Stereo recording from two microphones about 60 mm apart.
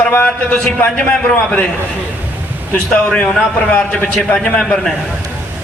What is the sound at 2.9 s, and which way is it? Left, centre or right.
A man's voice, centre.